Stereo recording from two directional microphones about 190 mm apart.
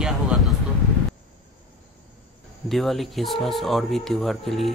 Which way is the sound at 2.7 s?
Centre (ahead or behind).